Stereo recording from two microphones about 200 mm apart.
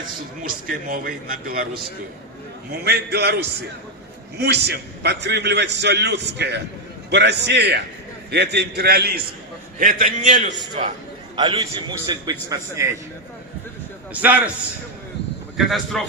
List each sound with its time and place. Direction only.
0.4 s a man's voice: 45° right (ahead or behind)
4.4 s a man's voice: 55° right (ahead or behind)
9.8 s a man's voice: 40° right (ahead or behind)
11.3 s a man's voice: 20° right (ahead or behind)
14.1 s a man's voice: 5° right (ahead or behind)
15.5 s speech: centre (ahead or behind)